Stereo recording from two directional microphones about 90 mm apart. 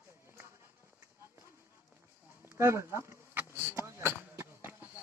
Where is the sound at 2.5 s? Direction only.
30° right (ahead or behind).